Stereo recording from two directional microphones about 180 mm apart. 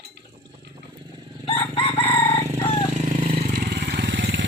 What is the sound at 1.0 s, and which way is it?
Chicken, 25° right (ahead or behind).